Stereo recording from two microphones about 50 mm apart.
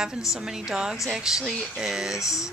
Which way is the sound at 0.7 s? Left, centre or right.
Centre.